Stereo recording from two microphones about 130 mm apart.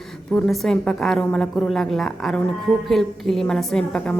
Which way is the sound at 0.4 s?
Centre (ahead or behind).